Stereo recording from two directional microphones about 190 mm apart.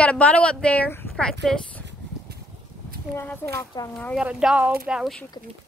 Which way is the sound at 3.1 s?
10° left (ahead or behind).